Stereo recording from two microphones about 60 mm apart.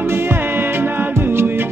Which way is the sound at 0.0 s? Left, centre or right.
Right.